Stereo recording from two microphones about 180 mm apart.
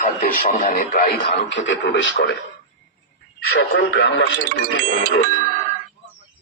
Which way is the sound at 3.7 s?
75° left (ahead or behind).